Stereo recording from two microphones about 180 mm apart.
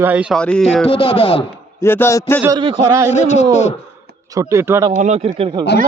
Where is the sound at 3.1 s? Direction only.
40° left (ahead or behind).